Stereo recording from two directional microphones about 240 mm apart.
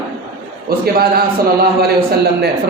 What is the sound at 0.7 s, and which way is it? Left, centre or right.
Speech, right.